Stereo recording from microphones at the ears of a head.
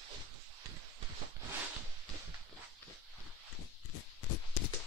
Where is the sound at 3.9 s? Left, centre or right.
Left.